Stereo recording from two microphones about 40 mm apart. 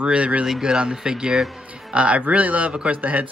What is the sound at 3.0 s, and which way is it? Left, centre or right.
Speech, right.